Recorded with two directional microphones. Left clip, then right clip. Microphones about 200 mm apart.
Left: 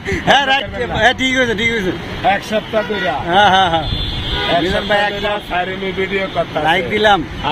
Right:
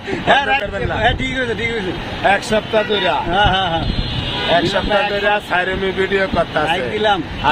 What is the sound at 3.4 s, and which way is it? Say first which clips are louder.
Speech: left 7 dB; 45° left (ahead or behind).